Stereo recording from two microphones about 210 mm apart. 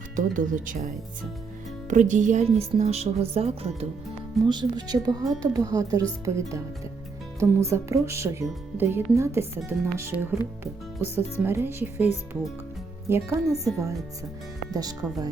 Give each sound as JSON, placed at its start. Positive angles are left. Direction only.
{"t": 0.2, "sound": "speech", "side_deg": -40}
{"t": 1.9, "sound": "speech", "side_deg": -35}
{"t": 13.1, "sound": "speech", "side_deg": -10}
{"t": 13.4, "sound": "a woman's voice", "side_deg": 0}
{"t": 14.7, "sound": "speech", "side_deg": -15}